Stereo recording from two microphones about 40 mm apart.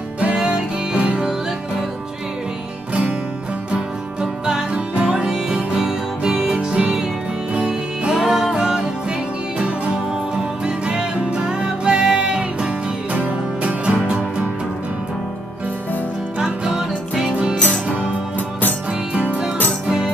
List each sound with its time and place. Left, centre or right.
0.4 s music: right
3.7 s music: centre
7.5 s music: right
8.1 s music: centre
10.9 s music: right
13.1 s music: right
16.3 s music: right
19.1 s music: right